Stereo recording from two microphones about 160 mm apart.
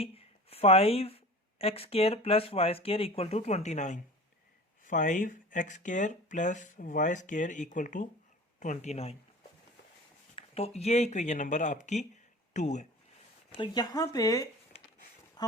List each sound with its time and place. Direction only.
0.0 s speech: 40° left (ahead or behind)
10.3 s speech: 40° left (ahead or behind)
13.6 s speech: 25° left (ahead or behind)